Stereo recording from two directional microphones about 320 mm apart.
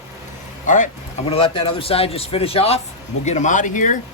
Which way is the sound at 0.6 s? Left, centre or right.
Left.